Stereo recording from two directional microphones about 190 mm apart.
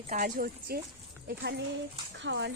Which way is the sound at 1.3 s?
60° right (ahead or behind).